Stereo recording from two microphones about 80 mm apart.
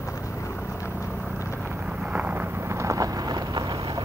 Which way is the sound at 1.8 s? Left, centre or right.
Centre.